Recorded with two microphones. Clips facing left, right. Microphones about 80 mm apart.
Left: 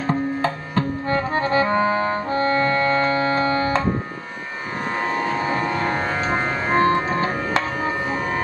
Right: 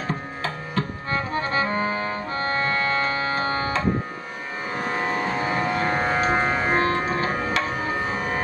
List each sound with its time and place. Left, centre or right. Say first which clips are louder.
0.1 s music: left 7 dB; left
5.6 s music: left 1 dB; centre
6.9 s music: left 3 dB; left